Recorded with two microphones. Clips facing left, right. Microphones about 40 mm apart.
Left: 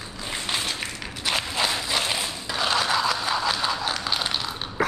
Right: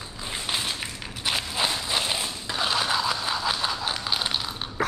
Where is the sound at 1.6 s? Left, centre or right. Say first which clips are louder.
Even; left.